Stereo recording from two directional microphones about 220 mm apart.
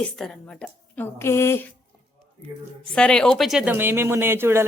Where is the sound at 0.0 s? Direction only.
5° left (ahead or behind).